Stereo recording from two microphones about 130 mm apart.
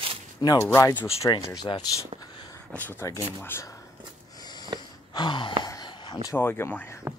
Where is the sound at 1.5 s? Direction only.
35° left (ahead or behind).